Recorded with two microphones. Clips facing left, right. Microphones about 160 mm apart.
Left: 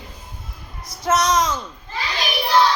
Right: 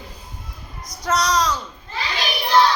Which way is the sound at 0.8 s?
25° left (ahead or behind).